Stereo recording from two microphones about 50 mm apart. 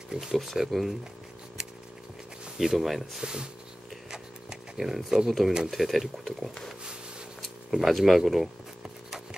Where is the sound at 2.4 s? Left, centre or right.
Centre.